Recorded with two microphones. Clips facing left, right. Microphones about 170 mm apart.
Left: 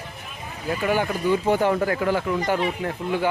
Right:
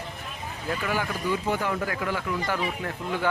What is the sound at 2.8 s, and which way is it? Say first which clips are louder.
Speech: left 5 dB; 15° left (ahead or behind).